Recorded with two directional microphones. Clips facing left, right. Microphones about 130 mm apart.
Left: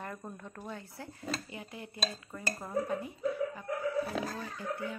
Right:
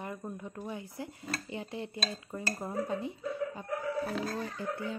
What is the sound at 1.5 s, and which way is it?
A woman's voice, 30° right (ahead or behind).